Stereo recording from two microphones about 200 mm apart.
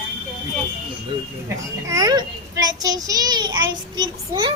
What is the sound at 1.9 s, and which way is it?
A child's voice, 20° right (ahead or behind).